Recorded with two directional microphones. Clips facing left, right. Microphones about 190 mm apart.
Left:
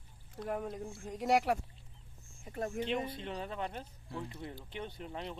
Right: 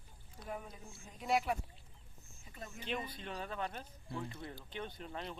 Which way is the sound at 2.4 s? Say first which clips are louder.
Left 13 dB; 55° left (ahead or behind).